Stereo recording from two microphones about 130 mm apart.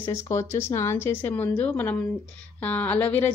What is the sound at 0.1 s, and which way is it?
A woman's voice, 20° left (ahead or behind).